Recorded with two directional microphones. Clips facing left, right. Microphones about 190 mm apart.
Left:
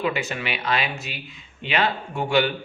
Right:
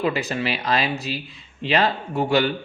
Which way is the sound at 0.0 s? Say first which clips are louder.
Right 3 dB; 35° right (ahead or behind).